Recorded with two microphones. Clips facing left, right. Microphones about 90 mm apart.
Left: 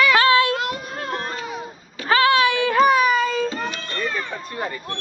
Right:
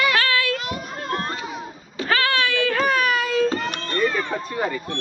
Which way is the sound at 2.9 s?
5° left (ahead or behind).